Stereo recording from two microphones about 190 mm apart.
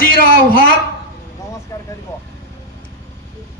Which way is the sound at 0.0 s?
50° left (ahead or behind).